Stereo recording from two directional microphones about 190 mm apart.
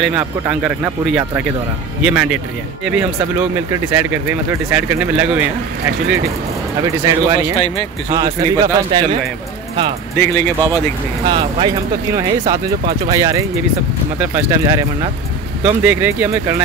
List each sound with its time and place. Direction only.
0.0 s speech: 5° right (ahead or behind)
6.8 s speech: 15° right (ahead or behind)
7.5 s speech: 30° left (ahead or behind)
8.1 s speech: 20° right (ahead or behind)
10.1 s speech: 15° left (ahead or behind)
11.2 s speech: 25° right (ahead or behind)